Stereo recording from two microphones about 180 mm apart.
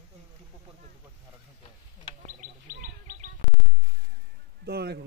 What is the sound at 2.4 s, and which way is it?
Bird, 45° right (ahead or behind).